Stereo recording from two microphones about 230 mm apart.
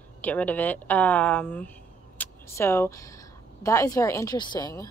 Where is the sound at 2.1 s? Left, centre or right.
Centre.